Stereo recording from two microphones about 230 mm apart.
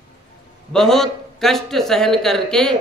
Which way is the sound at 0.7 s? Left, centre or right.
Centre.